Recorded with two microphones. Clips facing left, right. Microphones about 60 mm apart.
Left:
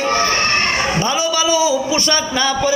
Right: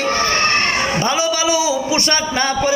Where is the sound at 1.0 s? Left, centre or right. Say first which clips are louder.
Even; right.